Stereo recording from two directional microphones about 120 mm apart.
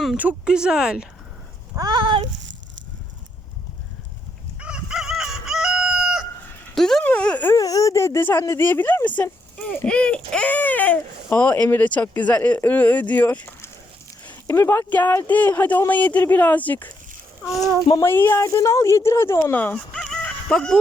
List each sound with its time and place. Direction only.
0.2 s speech: 10° right (ahead or behind)
1.7 s speech: 35° right (ahead or behind)
4.6 s chicken: 5° right (ahead or behind)
6.7 s speech: 5° left (ahead or behind)
7.5 s speech: 30° left (ahead or behind); by 16.9 s 15° left (ahead or behind)
18.0 s speech: 20° left (ahead or behind)